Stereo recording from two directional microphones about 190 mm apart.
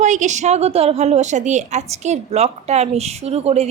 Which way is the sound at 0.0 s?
40° right (ahead or behind).